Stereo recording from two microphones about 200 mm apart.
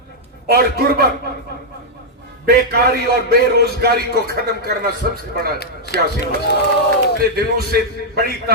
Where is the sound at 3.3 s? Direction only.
50° right (ahead or behind).